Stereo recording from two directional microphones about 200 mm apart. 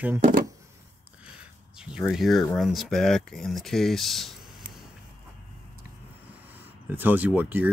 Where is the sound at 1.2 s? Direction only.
5° right (ahead or behind).